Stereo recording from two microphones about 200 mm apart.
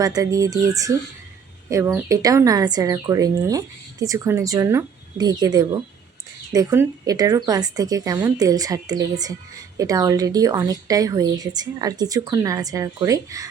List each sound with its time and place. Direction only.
0.0 s a woman's voice: 15° right (ahead or behind)